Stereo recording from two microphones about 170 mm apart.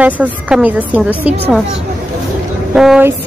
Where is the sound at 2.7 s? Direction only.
5° right (ahead or behind).